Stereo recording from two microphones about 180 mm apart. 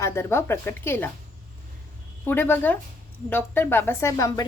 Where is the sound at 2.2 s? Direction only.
10° left (ahead or behind).